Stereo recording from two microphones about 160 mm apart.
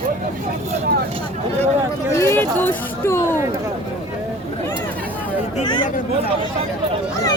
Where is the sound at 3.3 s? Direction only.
15° right (ahead or behind).